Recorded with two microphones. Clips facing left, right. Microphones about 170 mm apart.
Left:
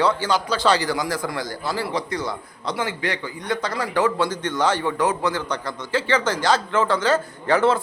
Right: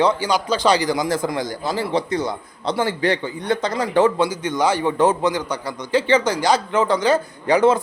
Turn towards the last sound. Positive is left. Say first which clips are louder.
# right 3 dB
turn(degrees=-15)  # may be behind; listen again after turning